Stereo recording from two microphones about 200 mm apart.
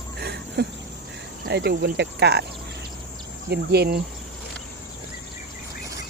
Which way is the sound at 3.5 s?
55° right (ahead or behind).